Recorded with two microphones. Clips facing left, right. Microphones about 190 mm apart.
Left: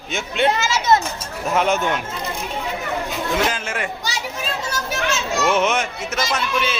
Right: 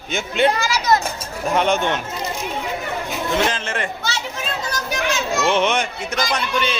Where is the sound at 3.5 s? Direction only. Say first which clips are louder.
Right 1 dB; 5° left (ahead or behind).